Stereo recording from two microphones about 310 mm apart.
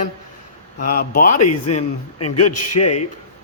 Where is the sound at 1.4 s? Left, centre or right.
Left.